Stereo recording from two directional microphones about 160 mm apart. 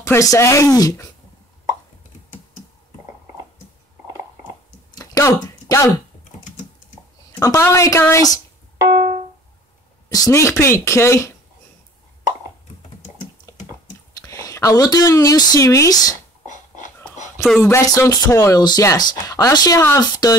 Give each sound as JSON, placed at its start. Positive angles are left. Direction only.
{"t": 0.0, "sound": "speech", "side_deg": 20}
{"t": 4.9, "sound": "a sound", "side_deg": 20}
{"t": 7.3, "sound": "speech", "side_deg": 20}
{"t": 8.7, "sound": "music", "side_deg": -30}
{"t": 10.1, "sound": "speech", "side_deg": 20}
{"t": 13.5, "sound": "typing", "side_deg": 20}
{"t": 14.2, "sound": "speech", "side_deg": 20}
{"t": 16.4, "sound": "a sound", "side_deg": 50}
{"t": 17.6, "sound": "speech", "side_deg": 15}